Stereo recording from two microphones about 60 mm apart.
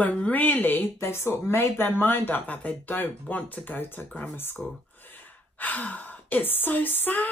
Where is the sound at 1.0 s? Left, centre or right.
Left.